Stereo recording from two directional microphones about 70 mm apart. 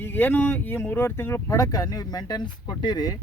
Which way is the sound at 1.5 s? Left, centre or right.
Left.